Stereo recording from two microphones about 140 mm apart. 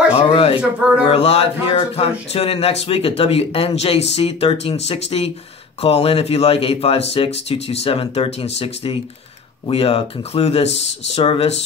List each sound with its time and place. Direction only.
0.1 s a sound: 45° left (ahead or behind)
0.6 s speech: 10° right (ahead or behind)
1.0 s speech: 45° left (ahead or behind)